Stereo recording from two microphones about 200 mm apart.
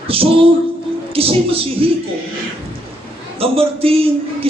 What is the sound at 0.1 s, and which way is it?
A man's voice, 30° right (ahead or behind).